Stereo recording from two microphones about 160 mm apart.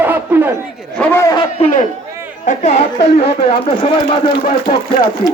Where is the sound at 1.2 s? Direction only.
20° left (ahead or behind).